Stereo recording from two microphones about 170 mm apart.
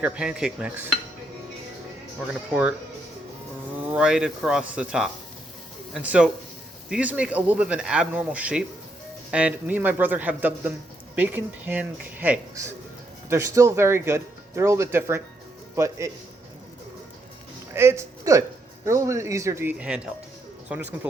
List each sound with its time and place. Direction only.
0.0 s speech: 5° right (ahead or behind)
2.5 s speech: 5° right (ahead or behind)
3.9 s speech: 5° right (ahead or behind)
17.7 s speech: 15° right (ahead or behind)